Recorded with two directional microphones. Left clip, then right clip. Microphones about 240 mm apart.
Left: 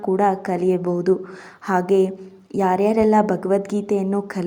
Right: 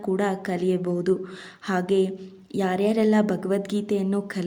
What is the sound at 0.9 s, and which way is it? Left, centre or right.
A woman's voice, centre.